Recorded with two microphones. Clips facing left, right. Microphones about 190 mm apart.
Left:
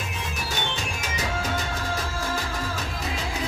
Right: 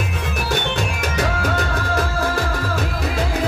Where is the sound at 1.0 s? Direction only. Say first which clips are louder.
Right 7 dB; 65° right (ahead or behind).